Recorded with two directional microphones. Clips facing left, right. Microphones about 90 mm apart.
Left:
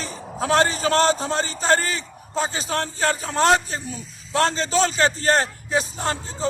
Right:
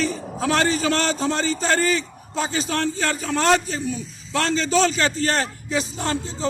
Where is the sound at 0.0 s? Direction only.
30° left (ahead or behind).